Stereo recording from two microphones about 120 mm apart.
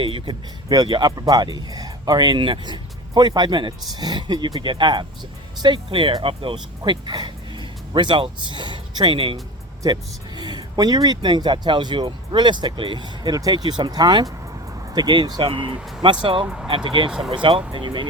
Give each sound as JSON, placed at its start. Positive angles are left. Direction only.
{"t": 0.0, "sound": "speech", "side_deg": -40}
{"t": 17.1, "sound": "speech", "side_deg": -5}
{"t": 17.3, "sound": "speech", "side_deg": -40}